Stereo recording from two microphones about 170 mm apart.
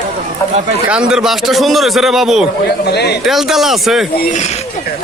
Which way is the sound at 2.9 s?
80° left.